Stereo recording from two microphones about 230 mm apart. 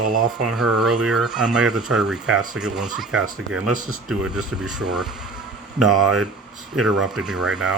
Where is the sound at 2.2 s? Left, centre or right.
Right.